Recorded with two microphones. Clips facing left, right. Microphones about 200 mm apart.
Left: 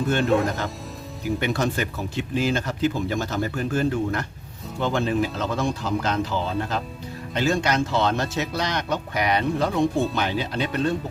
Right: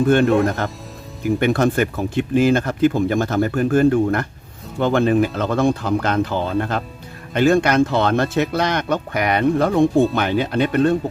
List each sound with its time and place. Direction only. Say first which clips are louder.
0.1 s speech: right 4 dB; 55° right (ahead or behind)